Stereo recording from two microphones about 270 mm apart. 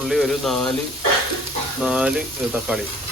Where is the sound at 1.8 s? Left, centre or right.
Centre.